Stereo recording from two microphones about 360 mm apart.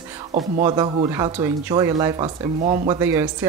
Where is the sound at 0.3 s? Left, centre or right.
Centre.